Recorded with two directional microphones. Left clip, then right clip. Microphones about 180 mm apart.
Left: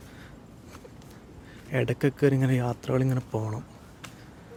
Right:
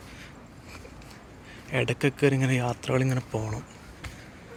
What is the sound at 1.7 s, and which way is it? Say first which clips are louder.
A man's voice: right 1 dB; 30° left (ahead or behind).